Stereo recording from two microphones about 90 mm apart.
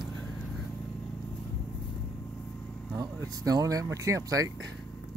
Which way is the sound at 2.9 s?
40° right (ahead or behind).